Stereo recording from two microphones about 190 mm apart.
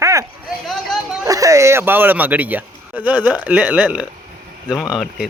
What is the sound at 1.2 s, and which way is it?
Speech, 15° right (ahead or behind).